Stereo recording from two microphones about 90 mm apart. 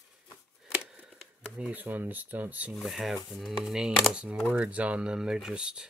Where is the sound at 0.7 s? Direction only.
10° right (ahead or behind).